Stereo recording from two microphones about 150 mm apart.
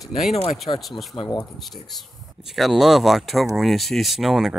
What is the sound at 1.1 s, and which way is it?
Speech, 35° left (ahead or behind).